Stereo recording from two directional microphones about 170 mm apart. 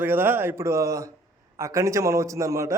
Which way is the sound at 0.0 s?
10° right (ahead or behind).